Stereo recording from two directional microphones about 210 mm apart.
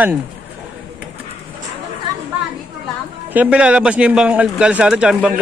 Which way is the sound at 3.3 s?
5° right (ahead or behind).